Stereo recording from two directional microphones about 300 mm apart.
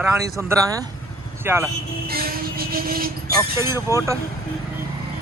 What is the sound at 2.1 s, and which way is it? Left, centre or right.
Speech, right.